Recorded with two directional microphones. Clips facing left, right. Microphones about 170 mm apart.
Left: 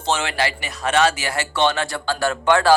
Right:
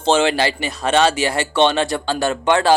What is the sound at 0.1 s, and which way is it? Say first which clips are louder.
Speech: right 6 dB; 25° right (ahead or behind).